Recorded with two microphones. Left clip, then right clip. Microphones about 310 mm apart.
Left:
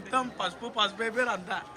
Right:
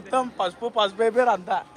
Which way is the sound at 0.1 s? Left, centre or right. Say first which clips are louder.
Right 6 dB; centre.